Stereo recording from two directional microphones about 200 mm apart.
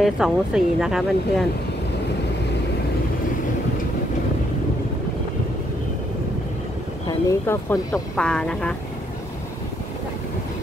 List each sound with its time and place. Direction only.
0.0 s speech: centre (ahead or behind)
7.1 s speech: 15° left (ahead or behind)
8.2 s speech: 5° left (ahead or behind)